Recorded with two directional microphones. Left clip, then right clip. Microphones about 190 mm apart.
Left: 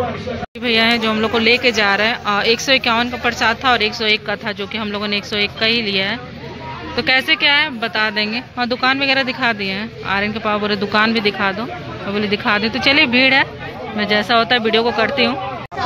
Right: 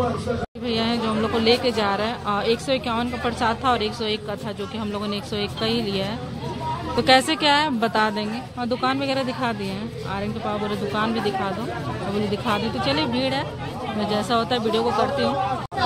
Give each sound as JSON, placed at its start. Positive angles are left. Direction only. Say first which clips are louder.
{"t": 0.7, "sound": "speech", "louder": "left 9 dB", "side_deg": 5}
{"t": 7.0, "sound": "speech", "louder": "left 3 dB", "side_deg": -20}
{"t": 8.5, "sound": "speech", "louder": "left 7 dB", "side_deg": -5}